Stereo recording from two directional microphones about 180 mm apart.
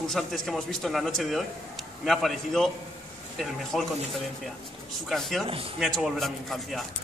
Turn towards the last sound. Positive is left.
turn(degrees=0)  # may be behind; listen again after turning